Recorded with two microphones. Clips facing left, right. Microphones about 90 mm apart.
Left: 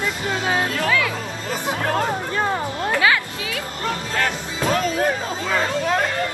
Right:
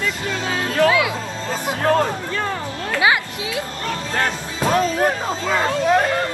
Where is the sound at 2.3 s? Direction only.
25° left (ahead or behind).